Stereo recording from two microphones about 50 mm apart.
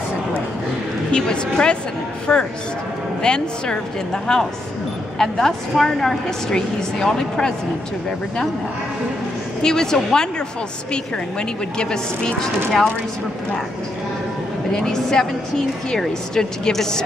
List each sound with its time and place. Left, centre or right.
1.1 s a woman's voice: centre
9.6 s a woman's voice: centre
11.8 s a woman's voice: centre
14.7 s a woman's voice: centre